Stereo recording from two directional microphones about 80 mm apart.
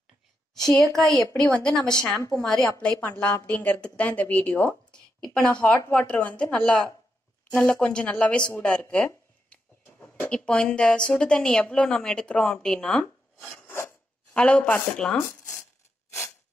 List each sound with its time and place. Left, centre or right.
0.6 s a woman's voice: centre
2.8 s a woman's voice: centre
13.4 s filing: centre
13.7 s filing: left
14.3 s a woman's voice: centre